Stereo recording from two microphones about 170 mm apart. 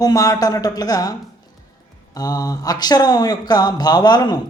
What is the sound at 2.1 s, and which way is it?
Speech, 20° left (ahead or behind).